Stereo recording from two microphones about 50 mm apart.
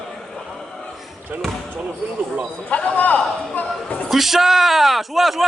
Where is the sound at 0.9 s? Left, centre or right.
Centre.